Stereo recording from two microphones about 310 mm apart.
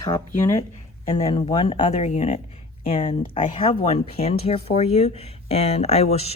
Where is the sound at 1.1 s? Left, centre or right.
Centre.